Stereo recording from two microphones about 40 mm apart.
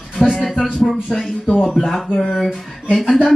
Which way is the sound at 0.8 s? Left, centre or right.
Centre.